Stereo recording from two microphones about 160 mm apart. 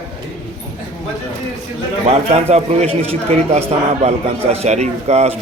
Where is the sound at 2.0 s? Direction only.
40° right (ahead or behind).